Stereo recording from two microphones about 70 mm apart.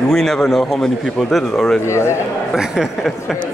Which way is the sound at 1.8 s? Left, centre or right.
Left.